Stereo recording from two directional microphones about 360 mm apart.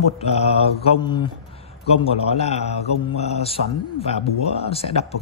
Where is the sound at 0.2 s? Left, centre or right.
Centre.